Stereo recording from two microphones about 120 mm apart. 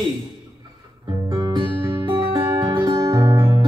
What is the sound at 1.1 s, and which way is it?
Music, 30° right (ahead or behind).